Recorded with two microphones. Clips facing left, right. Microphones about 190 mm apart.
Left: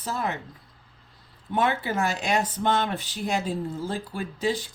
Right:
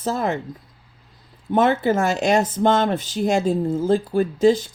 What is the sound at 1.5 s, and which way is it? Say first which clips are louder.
Speech: right 8 dB; 45° right (ahead or behind).